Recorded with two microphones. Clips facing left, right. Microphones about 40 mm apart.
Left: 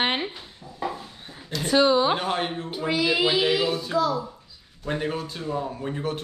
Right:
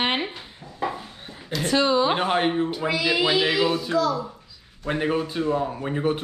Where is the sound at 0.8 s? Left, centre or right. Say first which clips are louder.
Right 2 dB; centre.